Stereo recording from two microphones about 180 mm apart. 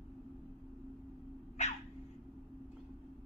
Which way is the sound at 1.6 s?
40° left (ahead or behind).